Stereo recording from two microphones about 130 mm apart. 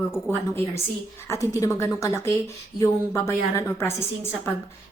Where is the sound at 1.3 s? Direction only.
20° left (ahead or behind).